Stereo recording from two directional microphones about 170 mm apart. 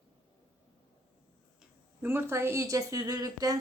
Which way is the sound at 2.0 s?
15° right (ahead or behind).